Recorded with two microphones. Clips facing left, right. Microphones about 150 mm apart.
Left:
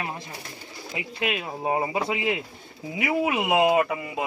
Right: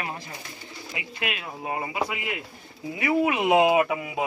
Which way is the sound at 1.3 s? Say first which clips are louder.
Left 6 dB; 30° left (ahead or behind).